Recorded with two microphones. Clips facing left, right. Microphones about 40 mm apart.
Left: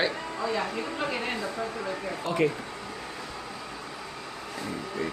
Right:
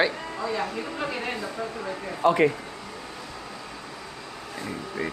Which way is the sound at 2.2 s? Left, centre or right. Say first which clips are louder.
Right 7 dB; right.